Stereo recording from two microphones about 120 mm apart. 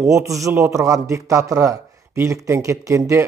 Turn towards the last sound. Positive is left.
turn(degrees=-25)  # may be behind; listen again after turning